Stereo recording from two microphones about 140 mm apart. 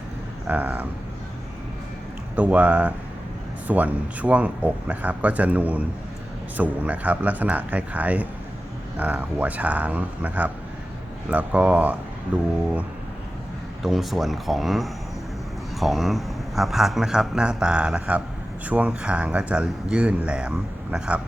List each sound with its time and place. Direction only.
0.4 s speech: 10° right (ahead or behind)
2.3 s speech: 10° right (ahead or behind)
13.8 s a man's voice: centre (ahead or behind)